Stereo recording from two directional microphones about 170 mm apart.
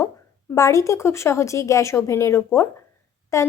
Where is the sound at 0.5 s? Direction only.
20° left (ahead or behind).